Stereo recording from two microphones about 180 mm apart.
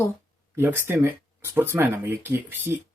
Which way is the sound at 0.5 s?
10° right (ahead or behind).